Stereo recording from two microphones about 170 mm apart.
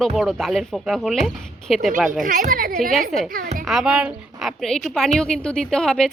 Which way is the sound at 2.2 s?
55° right (ahead or behind).